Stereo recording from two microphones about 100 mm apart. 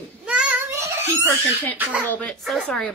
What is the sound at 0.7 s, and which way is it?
Crying, 25° right (ahead or behind).